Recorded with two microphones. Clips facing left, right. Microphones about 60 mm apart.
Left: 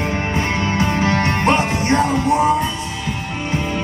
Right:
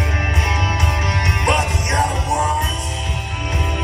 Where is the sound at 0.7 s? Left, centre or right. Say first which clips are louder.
Left 4 dB; left.